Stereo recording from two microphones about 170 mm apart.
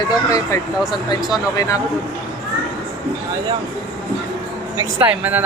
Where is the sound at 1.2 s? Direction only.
5° right (ahead or behind).